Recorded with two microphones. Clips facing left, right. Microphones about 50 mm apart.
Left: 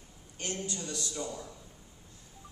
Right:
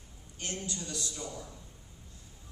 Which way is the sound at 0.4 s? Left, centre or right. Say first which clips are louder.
Left 2 dB; left.